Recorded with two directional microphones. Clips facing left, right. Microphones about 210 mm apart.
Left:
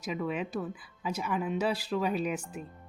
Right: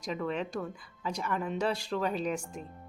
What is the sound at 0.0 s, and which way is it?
A woman's voice, 5° left (ahead or behind).